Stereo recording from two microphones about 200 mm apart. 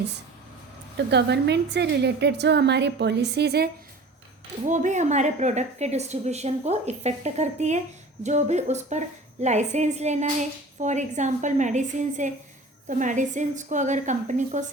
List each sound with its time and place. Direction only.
0.9 s a woman's voice: 60° right (ahead or behind)
4.6 s a woman's voice: 35° right (ahead or behind)